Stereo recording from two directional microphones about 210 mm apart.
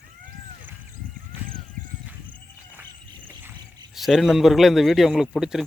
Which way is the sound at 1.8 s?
40° right (ahead or behind).